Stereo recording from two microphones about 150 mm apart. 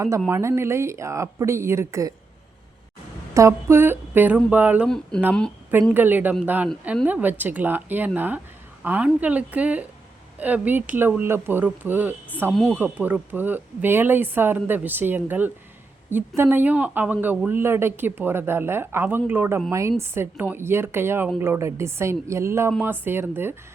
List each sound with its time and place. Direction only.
0.3 s speech: 20° right (ahead or behind)
3.3 s speech: 20° right (ahead or behind)
5.1 s speech: 5° left (ahead or behind)
5.9 s speech: 10° right (ahead or behind)